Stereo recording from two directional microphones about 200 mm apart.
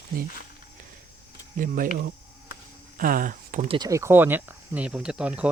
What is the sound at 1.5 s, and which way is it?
Speech, 40° right (ahead or behind).